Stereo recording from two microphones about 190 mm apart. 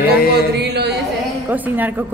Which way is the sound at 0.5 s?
60° right (ahead or behind).